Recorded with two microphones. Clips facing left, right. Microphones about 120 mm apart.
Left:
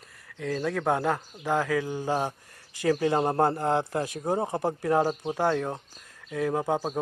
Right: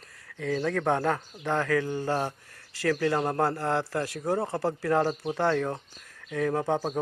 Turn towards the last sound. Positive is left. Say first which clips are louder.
# even
turn(degrees=10)  # may be behind; listen again after turning